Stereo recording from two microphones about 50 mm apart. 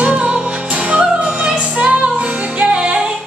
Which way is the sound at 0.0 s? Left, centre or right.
Right.